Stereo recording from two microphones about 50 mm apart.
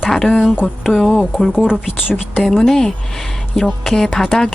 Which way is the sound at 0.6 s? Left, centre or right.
Left.